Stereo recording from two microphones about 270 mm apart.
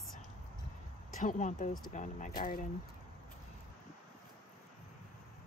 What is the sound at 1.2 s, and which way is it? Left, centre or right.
Speech, left.